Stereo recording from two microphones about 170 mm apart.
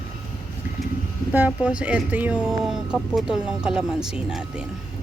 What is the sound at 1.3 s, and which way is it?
Speech, 10° right (ahead or behind).